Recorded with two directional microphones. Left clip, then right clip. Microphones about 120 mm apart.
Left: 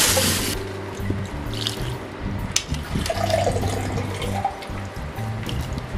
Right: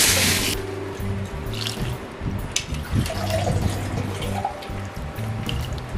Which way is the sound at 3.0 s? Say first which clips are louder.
Left 5 dB; 15° left (ahead or behind).